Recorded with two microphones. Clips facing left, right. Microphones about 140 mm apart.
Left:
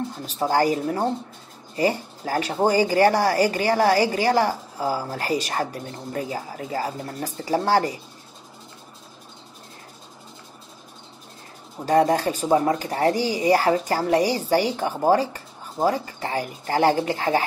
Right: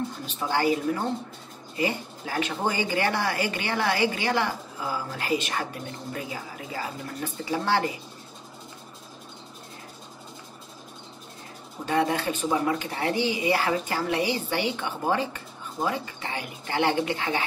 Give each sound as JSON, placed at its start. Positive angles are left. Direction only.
{"t": 0.3, "sound": "speech", "side_deg": 40}
{"t": 11.8, "sound": "speech", "side_deg": 40}